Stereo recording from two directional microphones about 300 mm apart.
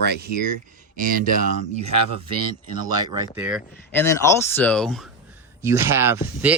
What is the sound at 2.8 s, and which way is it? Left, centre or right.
Speech, centre.